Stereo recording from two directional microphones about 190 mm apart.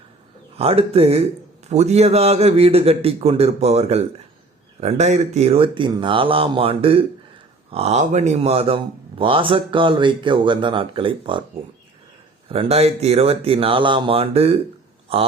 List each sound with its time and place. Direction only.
0.5 s a man's voice: 30° right (ahead or behind)
12.5 s a man's voice: 30° right (ahead or behind)